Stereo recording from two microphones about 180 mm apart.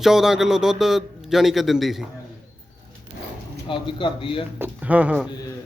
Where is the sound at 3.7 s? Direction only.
25° left (ahead or behind).